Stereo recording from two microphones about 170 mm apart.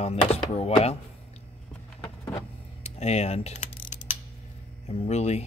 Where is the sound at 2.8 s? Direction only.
40° left (ahead or behind).